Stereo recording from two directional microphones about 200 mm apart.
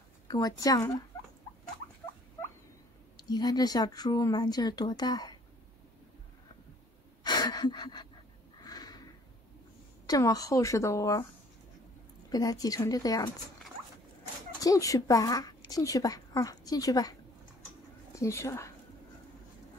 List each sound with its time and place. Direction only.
0.3 s speech: 20° left (ahead or behind)
3.3 s speech: 20° left (ahead or behind)
7.2 s gasp: 20° left (ahead or behind)
8.5 s a sound: 20° left (ahead or behind)
10.0 s a woman's voice: 15° left (ahead or behind)
12.3 s a woman's voice: 20° left (ahead or behind)
14.6 s a woman's voice: 15° left (ahead or behind)
18.1 s speech: 15° left (ahead or behind)